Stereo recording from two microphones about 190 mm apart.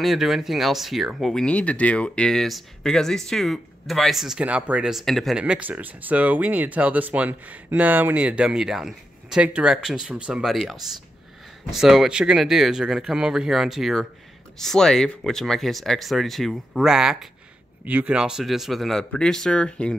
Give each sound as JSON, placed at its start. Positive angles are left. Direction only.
{"t": 0.0, "sound": "speech", "side_deg": 0}